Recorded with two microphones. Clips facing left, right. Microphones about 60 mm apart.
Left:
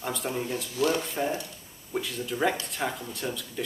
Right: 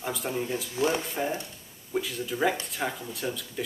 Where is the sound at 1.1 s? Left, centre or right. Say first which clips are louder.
Left 1 dB; centre.